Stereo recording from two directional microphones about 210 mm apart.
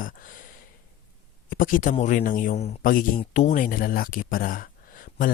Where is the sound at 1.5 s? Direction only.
40° left (ahead or behind).